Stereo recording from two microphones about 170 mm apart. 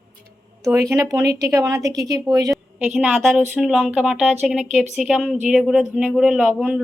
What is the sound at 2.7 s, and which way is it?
A woman's voice, 5° right (ahead or behind).